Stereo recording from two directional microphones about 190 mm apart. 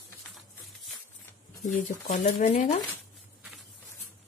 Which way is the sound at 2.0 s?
40° left (ahead or behind).